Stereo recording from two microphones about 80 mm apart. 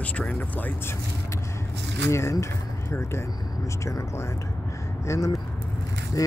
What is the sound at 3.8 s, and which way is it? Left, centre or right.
Speech, left.